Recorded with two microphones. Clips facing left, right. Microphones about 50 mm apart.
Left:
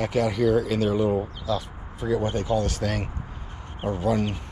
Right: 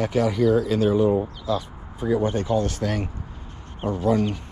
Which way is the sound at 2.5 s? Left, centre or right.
Right.